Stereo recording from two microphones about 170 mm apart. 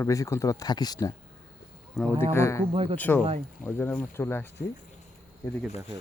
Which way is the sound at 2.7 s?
35° right (ahead or behind).